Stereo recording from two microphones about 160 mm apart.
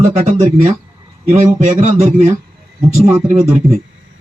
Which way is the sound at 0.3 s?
50° right (ahead or behind).